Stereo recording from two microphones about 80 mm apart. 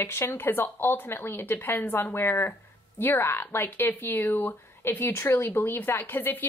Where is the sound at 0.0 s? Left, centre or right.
Left.